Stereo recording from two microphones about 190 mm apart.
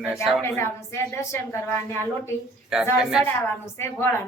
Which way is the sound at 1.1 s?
15° left (ahead or behind).